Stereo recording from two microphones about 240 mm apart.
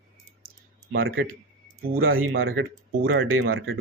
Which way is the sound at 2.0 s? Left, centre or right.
Right.